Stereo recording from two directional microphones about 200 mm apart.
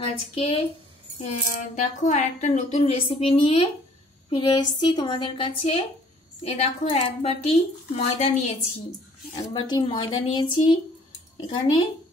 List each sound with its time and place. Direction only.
0.0 s a woman's voice: 30° left (ahead or behind)
9.3 s a woman's voice: 20° left (ahead or behind)